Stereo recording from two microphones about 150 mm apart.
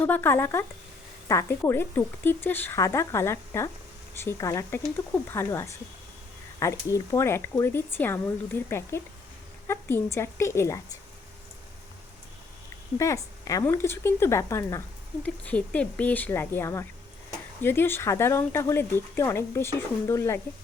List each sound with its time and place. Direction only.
0.0 s speech: 15° left (ahead or behind)
13.0 s speech: 20° left (ahead or behind)
15.2 s speech: 10° left (ahead or behind)